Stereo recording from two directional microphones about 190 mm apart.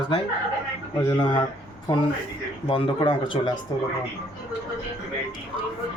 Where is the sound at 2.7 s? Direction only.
25° left (ahead or behind).